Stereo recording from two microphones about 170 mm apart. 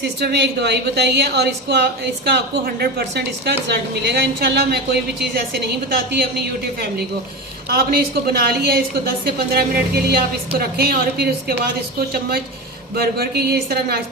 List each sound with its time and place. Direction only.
0.2 s a woman's voice: 75° right (ahead or behind)
7.7 s a woman's voice: 65° right (ahead or behind)